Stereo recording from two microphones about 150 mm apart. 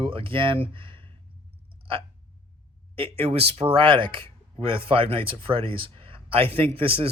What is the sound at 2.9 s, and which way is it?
Speech, 40° right (ahead or behind).